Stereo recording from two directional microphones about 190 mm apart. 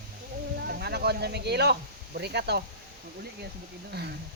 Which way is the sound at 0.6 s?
55° right (ahead or behind).